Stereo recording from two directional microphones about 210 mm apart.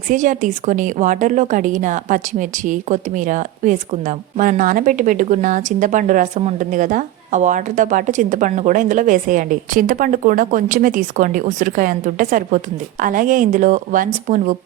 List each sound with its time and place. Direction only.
0.1 s a woman's voice: 40° right (ahead or behind)